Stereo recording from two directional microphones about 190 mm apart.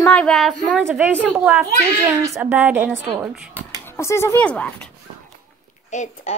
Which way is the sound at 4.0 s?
15° left (ahead or behind).